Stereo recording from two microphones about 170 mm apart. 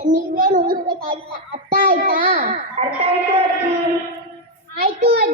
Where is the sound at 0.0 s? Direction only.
50° right (ahead or behind).